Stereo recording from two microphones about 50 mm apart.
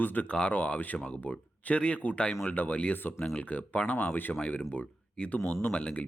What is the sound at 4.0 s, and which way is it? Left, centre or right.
Speech, left.